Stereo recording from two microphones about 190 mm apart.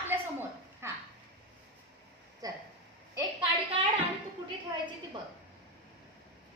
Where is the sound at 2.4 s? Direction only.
20° right (ahead or behind).